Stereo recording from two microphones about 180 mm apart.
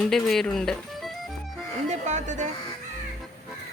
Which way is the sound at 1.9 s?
40° right (ahead or behind).